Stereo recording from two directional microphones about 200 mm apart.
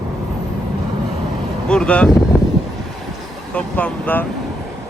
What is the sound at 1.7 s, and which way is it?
Speech, 5° left (ahead or behind).